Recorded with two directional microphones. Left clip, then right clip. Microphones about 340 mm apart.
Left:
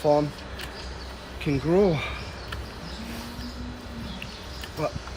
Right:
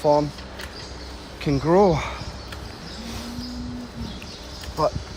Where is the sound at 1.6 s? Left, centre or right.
Centre.